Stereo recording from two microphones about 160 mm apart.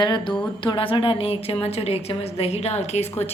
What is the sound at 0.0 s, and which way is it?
A woman's voice, 30° left (ahead or behind).